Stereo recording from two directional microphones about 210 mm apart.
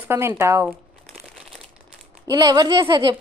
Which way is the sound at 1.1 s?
Centre (ahead or behind).